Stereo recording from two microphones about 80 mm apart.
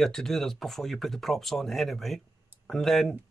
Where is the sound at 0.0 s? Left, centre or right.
Centre.